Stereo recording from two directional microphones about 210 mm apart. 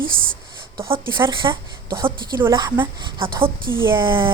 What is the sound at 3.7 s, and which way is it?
Speech, 10° right (ahead or behind).